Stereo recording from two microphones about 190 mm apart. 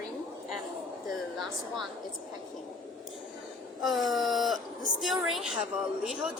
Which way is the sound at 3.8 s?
Centre (ahead or behind).